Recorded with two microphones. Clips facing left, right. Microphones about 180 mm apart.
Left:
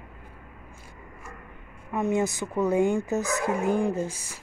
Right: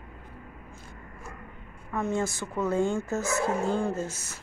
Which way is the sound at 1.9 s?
20° left (ahead or behind).